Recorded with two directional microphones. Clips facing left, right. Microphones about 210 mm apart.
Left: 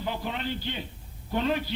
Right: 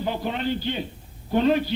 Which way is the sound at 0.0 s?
35° right (ahead or behind).